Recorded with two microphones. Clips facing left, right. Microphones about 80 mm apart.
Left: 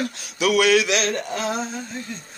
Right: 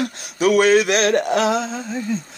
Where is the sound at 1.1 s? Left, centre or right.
Right.